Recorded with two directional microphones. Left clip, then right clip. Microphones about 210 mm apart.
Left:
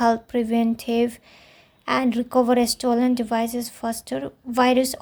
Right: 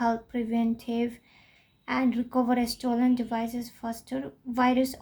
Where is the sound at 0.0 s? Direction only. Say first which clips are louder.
Left 8 dB; 35° left (ahead or behind).